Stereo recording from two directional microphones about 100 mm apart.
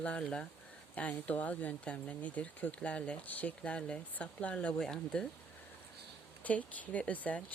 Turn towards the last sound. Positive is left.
turn(degrees=15)  # may be behind; listen again after turning